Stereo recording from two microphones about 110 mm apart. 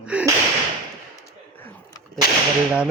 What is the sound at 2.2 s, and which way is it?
Whip, 45° right (ahead or behind).